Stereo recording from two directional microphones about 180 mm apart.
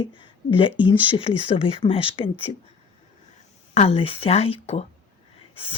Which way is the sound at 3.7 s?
35° left (ahead or behind).